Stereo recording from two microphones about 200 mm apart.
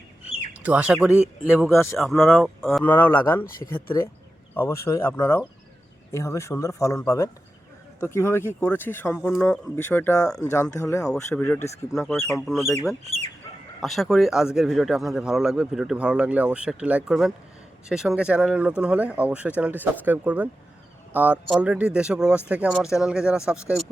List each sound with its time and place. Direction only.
0.6 s speech: 5° right (ahead or behind)
1.7 s speech: 15° left (ahead or behind)
2.0 s speech: centre (ahead or behind)
3.4 s speech: 45° left (ahead or behind)
3.8 s speech: 10° left (ahead or behind)
12.0 s speech: centre (ahead or behind)
13.1 s speech: 30° right (ahead or behind)
13.8 s speech: centre (ahead or behind)